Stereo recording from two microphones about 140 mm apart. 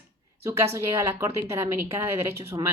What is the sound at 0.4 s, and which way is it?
Speech, 20° right (ahead or behind).